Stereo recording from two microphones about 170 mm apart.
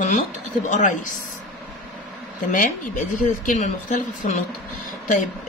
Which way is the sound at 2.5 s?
50° left (ahead or behind).